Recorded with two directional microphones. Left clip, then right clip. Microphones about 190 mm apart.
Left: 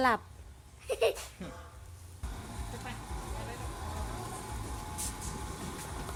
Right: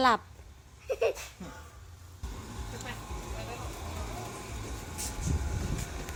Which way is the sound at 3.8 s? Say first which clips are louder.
Right 1 dB; centre (ahead or behind).